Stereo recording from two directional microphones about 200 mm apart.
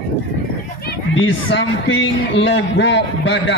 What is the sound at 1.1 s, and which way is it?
A man's voice, 70° left (ahead or behind).